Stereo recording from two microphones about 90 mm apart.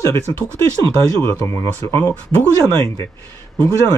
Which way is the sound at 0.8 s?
35° left (ahead or behind).